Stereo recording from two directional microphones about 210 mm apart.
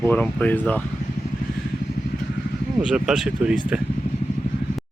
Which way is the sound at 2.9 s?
5° right (ahead or behind).